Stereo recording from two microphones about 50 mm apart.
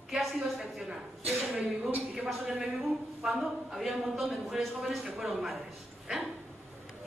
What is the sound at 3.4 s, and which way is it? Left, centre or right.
Speech, centre.